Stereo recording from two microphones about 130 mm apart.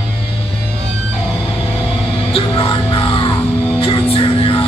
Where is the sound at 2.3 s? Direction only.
40° left (ahead or behind).